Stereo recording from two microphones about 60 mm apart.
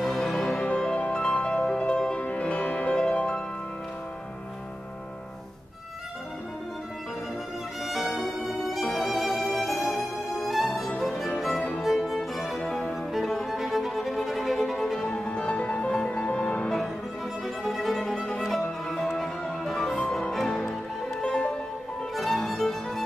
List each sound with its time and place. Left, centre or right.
0.0 s music: centre
7.8 s music: centre; by 16.6 s left
17.6 s violin: centre
18.6 s music: centre
22.1 s music: centre